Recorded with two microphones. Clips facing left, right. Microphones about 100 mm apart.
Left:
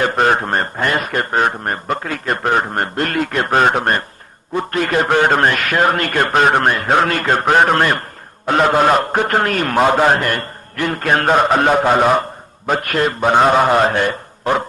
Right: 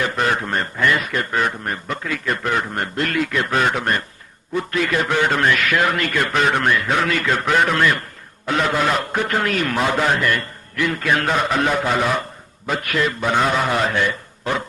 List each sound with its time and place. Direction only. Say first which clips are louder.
0.0 s a man's voice: left 5 dB; 45° left (ahead or behind)